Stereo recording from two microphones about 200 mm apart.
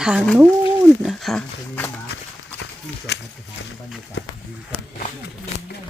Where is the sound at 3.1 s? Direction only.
60° left (ahead or behind).